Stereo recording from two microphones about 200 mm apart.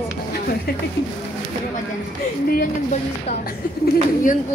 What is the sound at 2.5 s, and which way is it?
Speech, 45° left (ahead or behind).